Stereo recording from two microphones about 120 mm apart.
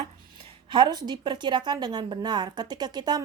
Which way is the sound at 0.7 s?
40° right (ahead or behind).